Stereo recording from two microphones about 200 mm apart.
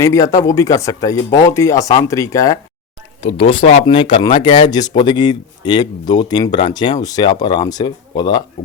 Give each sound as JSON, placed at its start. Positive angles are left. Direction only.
{"t": 0.0, "sound": "speech", "side_deg": 15}
{"t": 3.2, "sound": "speech", "side_deg": 30}